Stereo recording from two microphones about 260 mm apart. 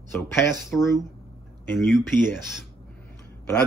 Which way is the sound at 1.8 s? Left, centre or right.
Centre.